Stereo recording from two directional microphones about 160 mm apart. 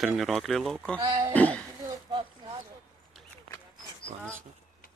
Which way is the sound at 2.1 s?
35° right (ahead or behind).